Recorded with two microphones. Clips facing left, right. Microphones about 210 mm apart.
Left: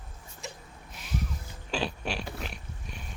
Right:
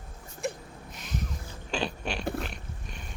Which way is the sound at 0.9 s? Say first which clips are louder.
Left 1 dB; 5° left (ahead or behind).